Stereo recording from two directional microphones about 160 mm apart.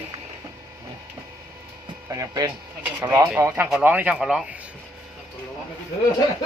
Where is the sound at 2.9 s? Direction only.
10° right (ahead or behind).